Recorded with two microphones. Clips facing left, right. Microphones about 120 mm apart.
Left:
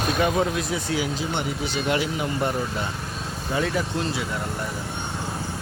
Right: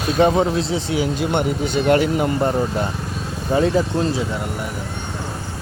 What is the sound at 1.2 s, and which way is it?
Speech, 55° right (ahead or behind).